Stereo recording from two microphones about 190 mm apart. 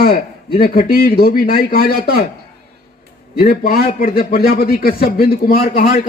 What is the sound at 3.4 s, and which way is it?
A man's voice, 50° left (ahead or behind).